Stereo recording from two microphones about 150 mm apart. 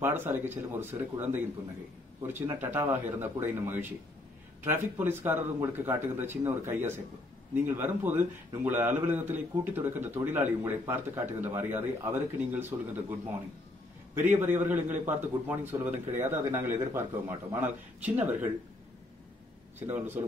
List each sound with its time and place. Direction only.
0.0 s a man's voice: 15° right (ahead or behind)
19.9 s a man's voice: 15° right (ahead or behind)